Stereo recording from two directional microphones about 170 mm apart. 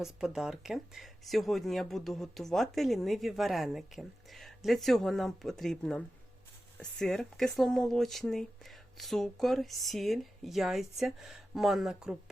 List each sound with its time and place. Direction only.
0.0 s speech: 5° right (ahead or behind)